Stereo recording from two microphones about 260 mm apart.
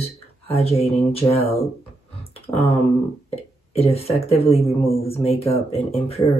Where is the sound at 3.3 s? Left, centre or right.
Left.